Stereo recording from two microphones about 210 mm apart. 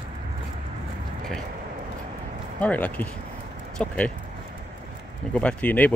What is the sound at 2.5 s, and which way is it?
Speech, 5° left (ahead or behind).